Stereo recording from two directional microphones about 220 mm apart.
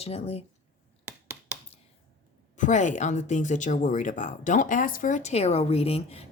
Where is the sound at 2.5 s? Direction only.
35° left (ahead or behind).